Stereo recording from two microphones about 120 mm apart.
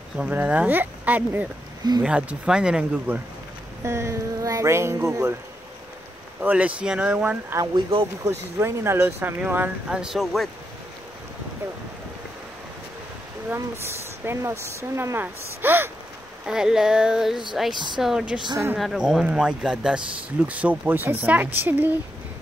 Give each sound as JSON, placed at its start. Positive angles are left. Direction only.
{"t": 0.2, "sound": "speech", "side_deg": -15}
{"t": 3.8, "sound": "speech", "side_deg": -25}
{"t": 6.4, "sound": "speech", "side_deg": -10}
{"t": 7.7, "sound": "speech", "side_deg": -45}
{"t": 8.2, "sound": "speech", "side_deg": -25}
{"t": 14.2, "sound": "speech", "side_deg": -20}
{"t": 16.4, "sound": "a sound", "side_deg": -5}
{"t": 17.7, "sound": "speech", "side_deg": -40}
{"t": 18.0, "sound": "speech", "side_deg": -5}